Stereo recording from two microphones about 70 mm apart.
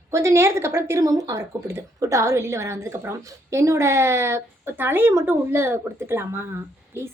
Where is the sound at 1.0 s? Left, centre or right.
Right.